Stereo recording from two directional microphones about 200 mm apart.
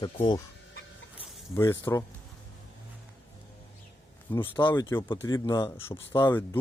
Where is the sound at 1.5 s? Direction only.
15° left (ahead or behind).